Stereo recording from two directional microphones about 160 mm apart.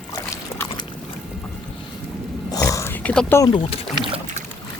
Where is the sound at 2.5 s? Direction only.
20° left (ahead or behind).